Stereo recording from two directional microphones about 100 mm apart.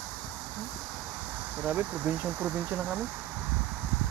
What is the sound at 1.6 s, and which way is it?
Speech, 15° right (ahead or behind).